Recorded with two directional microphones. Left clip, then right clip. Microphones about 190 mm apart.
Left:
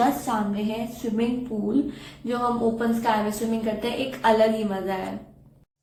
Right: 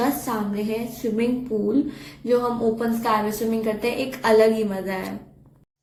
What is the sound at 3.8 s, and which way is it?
Speech, 15° right (ahead or behind).